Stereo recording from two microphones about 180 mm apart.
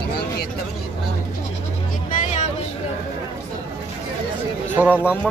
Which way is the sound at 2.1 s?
45° left (ahead or behind).